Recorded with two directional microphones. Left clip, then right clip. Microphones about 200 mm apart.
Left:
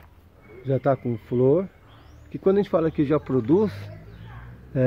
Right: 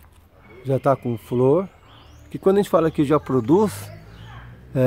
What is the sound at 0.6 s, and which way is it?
Speech, 15° right (ahead or behind).